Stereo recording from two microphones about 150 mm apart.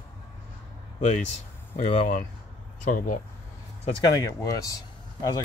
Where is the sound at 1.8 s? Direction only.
60° left (ahead or behind).